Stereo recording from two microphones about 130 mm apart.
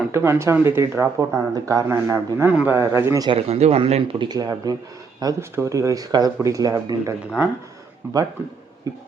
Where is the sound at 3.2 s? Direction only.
50° right (ahead or behind).